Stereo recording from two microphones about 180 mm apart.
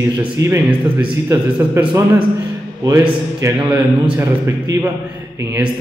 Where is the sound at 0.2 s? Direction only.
10° right (ahead or behind).